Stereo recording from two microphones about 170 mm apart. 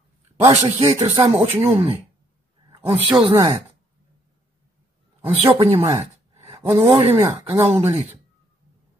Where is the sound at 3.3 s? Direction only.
25° right (ahead or behind).